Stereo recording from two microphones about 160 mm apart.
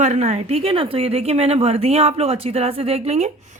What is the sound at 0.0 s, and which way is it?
A woman's voice, 45° right (ahead or behind).